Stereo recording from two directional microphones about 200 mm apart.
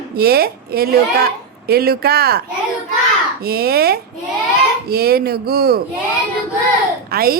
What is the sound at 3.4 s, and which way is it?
A woman's voice, 50° right (ahead or behind).